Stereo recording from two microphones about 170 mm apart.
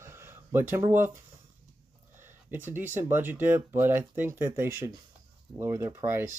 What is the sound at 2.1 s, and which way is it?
Speech, 10° right (ahead or behind).